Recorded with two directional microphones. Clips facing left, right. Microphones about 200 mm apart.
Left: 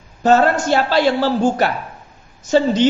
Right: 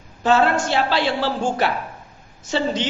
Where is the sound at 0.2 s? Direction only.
40° left (ahead or behind).